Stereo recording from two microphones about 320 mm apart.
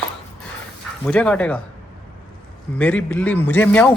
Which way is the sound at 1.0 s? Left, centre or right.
Centre.